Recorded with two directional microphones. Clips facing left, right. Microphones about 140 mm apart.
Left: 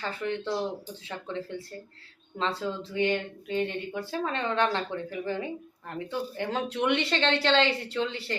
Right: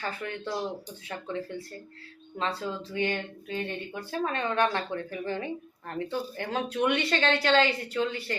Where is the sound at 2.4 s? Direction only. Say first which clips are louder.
Left 1 dB; 25° left (ahead or behind).